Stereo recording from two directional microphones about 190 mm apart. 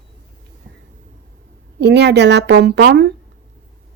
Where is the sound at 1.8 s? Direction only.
65° right (ahead or behind).